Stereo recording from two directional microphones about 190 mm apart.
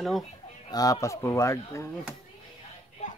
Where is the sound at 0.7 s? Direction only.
20° left (ahead or behind).